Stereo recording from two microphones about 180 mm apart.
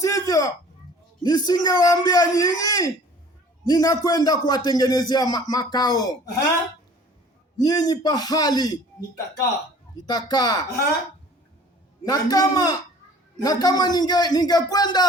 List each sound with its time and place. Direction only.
0.0 s a sound: 20° left (ahead or behind)
1.2 s a man's voice: 20° left (ahead or behind)
7.6 s a man's voice: 20° left (ahead or behind)
12.0 s a man's voice: 20° left (ahead or behind)